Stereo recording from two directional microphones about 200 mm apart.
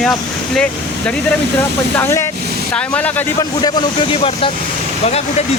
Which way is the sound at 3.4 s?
20° left (ahead or behind).